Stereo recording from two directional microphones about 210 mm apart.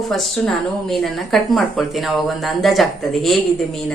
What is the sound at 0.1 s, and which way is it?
A woman's voice, centre (ahead or behind).